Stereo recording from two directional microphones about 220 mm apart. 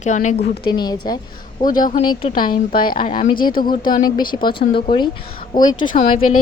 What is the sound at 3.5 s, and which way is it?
Speech, 40° left (ahead or behind).